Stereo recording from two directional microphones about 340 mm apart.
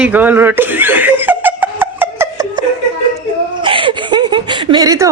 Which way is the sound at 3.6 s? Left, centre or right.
Centre.